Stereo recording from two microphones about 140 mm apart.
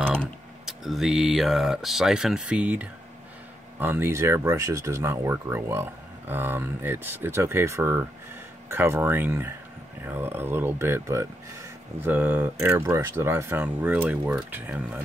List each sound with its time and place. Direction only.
0.7 s speech: centre (ahead or behind)